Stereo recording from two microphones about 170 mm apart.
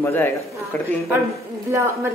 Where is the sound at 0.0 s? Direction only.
15° left (ahead or behind).